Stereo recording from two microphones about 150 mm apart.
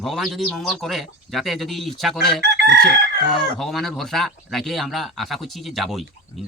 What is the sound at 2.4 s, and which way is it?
Chicken, 90° right.